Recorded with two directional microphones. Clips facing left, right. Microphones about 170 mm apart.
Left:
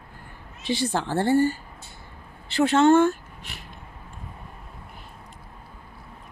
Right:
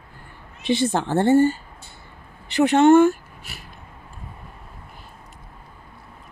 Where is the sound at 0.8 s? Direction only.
50° right (ahead or behind).